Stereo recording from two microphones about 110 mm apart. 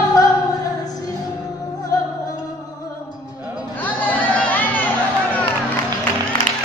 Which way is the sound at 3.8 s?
15° left (ahead or behind).